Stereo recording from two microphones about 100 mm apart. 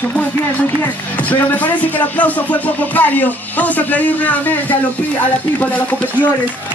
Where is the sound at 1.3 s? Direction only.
15° left (ahead or behind).